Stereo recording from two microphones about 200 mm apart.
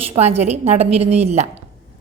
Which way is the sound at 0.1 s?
30° right (ahead or behind).